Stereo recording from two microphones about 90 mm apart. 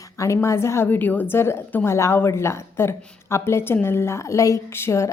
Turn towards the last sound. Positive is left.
turn(degrees=30)  # may be behind; listen again after turning